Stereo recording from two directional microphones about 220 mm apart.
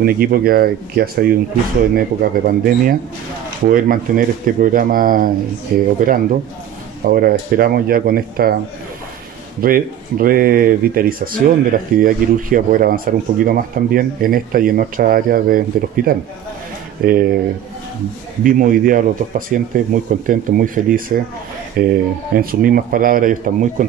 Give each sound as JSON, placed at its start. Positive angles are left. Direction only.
{"t": 0.0, "sound": "speech", "side_deg": -40}
{"t": 9.6, "sound": "speech", "side_deg": -40}
{"t": 18.4, "sound": "speech", "side_deg": -40}